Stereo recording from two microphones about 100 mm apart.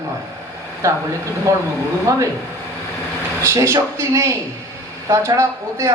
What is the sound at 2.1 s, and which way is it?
Speech, 30° right (ahead or behind).